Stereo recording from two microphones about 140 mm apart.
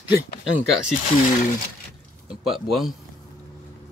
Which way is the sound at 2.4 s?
Centre (ahead or behind).